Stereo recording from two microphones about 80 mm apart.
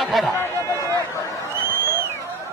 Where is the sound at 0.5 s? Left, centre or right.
Right.